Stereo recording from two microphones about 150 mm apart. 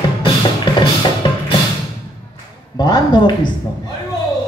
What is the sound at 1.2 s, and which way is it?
Music, 35° left (ahead or behind).